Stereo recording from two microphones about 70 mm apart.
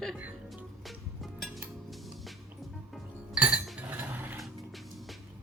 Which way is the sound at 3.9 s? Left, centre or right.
Right.